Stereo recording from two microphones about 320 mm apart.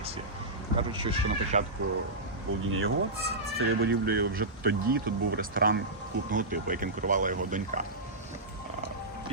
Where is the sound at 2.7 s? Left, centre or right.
Right.